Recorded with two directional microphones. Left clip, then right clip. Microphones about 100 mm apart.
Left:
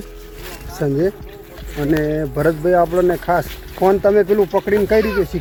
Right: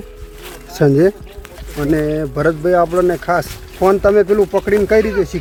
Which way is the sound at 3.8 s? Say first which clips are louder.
Right 2 dB; 30° right (ahead or behind).